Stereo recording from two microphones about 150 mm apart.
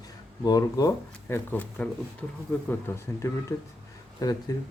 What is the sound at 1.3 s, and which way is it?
Speech, 10° left (ahead or behind).